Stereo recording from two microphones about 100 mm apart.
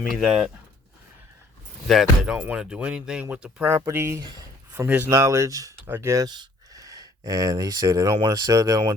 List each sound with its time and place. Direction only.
0.1 s speech: 5° right (ahead or behind)
1.9 s speech: 5° right (ahead or behind)
3.8 s speech: 25° right (ahead or behind)
5.8 s speech: 25° right (ahead or behind)
6.2 s speech: 45° right (ahead or behind)